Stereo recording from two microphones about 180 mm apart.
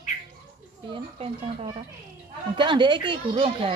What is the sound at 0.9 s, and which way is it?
A child's voice, 30° right (ahead or behind).